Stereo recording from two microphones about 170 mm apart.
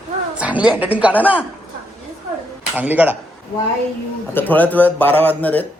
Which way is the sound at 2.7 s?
10° right (ahead or behind).